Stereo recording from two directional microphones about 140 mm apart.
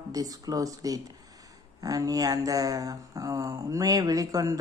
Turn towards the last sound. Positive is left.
turn(degrees=-25)  # may be behind; listen again after turning